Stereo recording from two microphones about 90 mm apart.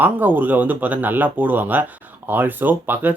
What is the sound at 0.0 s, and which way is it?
Speech, 20° right (ahead or behind).